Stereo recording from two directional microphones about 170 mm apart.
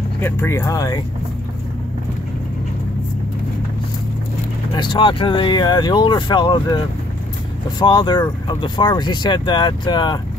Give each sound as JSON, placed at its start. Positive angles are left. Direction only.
{"t": 0.2, "sound": "speech", "side_deg": 15}
{"t": 4.7, "sound": "speech", "side_deg": 25}
{"t": 7.8, "sound": "speech", "side_deg": 25}